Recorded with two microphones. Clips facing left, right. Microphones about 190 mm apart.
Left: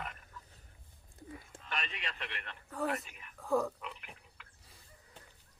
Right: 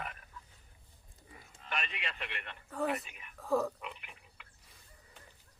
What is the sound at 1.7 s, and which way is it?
Speech, 5° right (ahead or behind).